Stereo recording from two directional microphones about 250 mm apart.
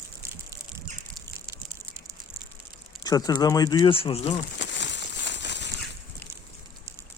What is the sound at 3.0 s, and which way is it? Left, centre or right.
Speech, centre.